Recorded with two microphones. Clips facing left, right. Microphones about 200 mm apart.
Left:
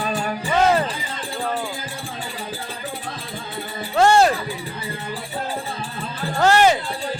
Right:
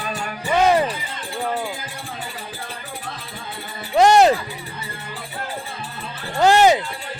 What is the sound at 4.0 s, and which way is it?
Music, 20° right (ahead or behind).